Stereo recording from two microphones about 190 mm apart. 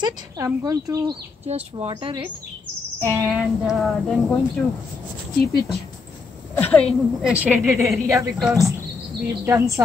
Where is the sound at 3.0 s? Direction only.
10° right (ahead or behind).